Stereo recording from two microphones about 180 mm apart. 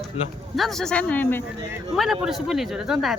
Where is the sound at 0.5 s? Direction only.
Centre (ahead or behind).